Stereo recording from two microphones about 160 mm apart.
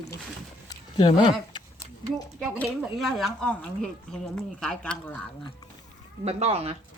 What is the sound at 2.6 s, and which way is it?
Speech, centre (ahead or behind).